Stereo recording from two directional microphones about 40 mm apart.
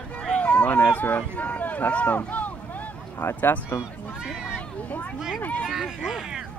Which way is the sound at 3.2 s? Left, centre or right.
Left.